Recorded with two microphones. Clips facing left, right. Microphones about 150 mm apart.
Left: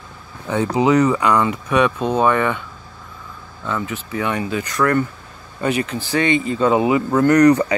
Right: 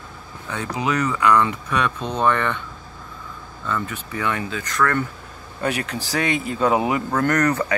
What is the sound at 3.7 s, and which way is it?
Speech, 15° left (ahead or behind).